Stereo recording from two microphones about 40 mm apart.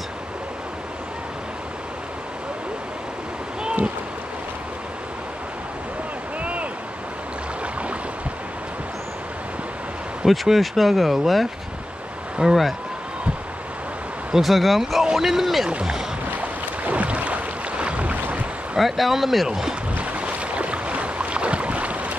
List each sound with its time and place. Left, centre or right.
3.6 s a sound: right
6.4 s a sound: right
10.2 s speech: centre
12.4 s speech: right
14.3 s speech: centre
16.3 s boat: right
18.8 s speech: centre
20.0 s boat: right